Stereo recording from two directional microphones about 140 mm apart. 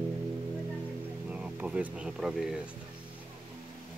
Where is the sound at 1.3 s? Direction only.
10° right (ahead or behind).